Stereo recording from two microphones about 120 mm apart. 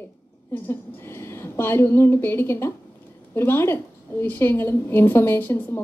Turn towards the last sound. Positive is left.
turn(degrees=20)  # may be behind; listen again after turning